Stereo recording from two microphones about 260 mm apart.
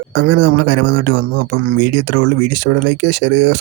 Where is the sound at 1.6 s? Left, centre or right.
Right.